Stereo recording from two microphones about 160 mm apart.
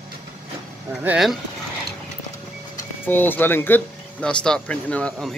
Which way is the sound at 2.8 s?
10° left (ahead or behind).